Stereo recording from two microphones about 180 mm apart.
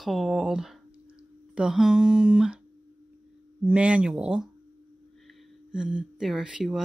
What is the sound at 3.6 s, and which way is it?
Speech, 5° right (ahead or behind).